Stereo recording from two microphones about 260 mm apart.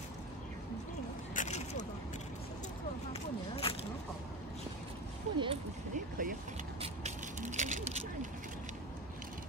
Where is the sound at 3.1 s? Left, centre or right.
Left.